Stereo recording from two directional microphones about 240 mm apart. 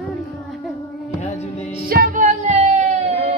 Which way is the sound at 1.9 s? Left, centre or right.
Right.